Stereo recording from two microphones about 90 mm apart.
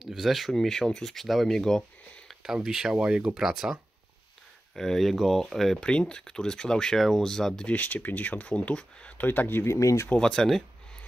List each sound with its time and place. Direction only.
0.0 s speech: 5° right (ahead or behind)
2.4 s speech: 5° right (ahead or behind)
4.7 s speech: 5° left (ahead or behind); by 9.8 s 25° left (ahead or behind)
9.8 s speech: 35° left (ahead or behind)
10.0 s speech: 10° left (ahead or behind)